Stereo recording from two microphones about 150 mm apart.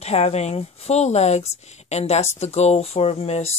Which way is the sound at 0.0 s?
45° left (ahead or behind).